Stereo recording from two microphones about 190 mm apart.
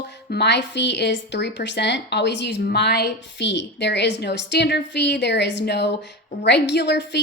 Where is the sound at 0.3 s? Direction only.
65° left (ahead or behind).